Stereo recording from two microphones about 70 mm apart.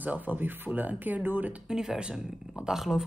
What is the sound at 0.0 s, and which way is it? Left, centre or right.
Speech, right.